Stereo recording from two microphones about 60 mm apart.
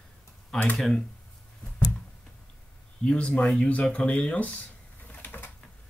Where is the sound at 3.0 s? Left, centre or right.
Centre.